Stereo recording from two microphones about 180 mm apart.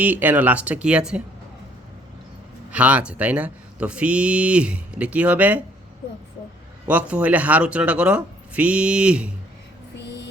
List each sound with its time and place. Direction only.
0.0 s speech: 10° right (ahead or behind)
2.6 s speech: 5° right (ahead or behind)
6.8 s speech: 5° right (ahead or behind)
10.0 s a sound: 70° left (ahead or behind)